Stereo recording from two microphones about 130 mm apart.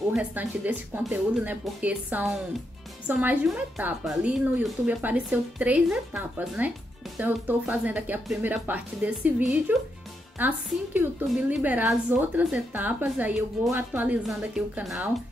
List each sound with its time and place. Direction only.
0.1 s a woman's voice: 10° right (ahead or behind)
13.7 s speech: 15° right (ahead or behind)
14.2 s a woman's voice: 5° right (ahead or behind)